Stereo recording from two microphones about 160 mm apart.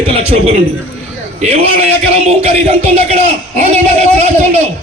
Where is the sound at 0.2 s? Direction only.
40° right (ahead or behind).